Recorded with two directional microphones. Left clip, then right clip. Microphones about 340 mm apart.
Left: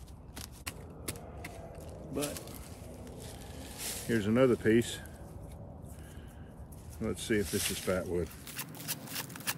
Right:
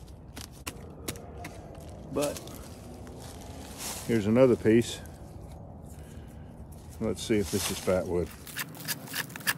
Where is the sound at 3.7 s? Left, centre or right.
Centre.